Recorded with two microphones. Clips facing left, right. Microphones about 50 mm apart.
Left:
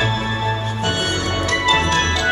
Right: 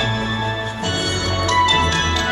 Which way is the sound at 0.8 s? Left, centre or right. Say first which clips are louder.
Left 1 dB; left.